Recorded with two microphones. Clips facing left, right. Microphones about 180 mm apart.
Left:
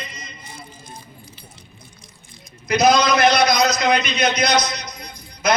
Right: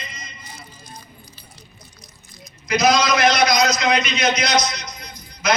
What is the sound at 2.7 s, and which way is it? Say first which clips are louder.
A man's voice: left 2 dB; 55° left (ahead or behind).